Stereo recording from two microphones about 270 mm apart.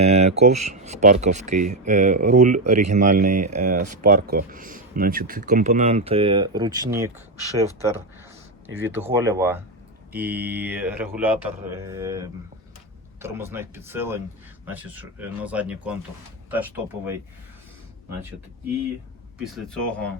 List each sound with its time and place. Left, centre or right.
0.0 s a sound: right
0.6 s speech: right
8.6 s speech: right
9.1 s speech: centre
19.4 s speech: centre